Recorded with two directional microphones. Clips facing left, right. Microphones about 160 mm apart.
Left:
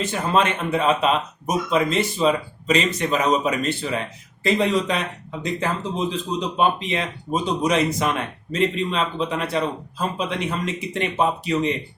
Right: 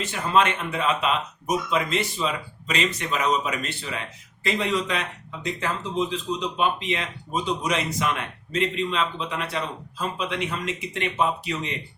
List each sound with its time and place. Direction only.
0.0 s speech: 40° left (ahead or behind)